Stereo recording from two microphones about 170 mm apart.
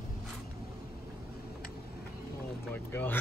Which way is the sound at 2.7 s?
10° left (ahead or behind).